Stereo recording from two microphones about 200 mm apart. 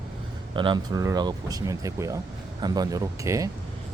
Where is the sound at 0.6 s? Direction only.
20° right (ahead or behind).